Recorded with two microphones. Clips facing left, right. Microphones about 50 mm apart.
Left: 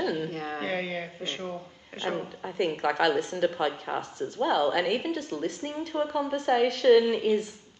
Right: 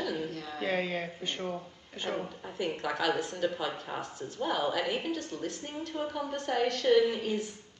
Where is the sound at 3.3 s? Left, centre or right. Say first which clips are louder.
Left 5 dB; left.